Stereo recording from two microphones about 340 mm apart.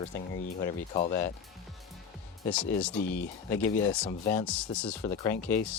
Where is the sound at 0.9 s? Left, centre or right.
Left.